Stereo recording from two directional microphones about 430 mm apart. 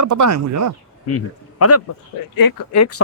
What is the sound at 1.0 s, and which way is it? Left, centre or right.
Speech, left.